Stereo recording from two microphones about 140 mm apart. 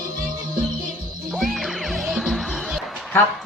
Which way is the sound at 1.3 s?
Centre (ahead or behind).